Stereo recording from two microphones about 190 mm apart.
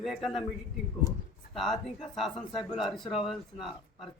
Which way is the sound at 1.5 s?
Centre (ahead or behind).